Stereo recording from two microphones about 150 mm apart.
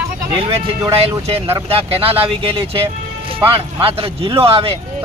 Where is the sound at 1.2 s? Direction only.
40° right (ahead or behind).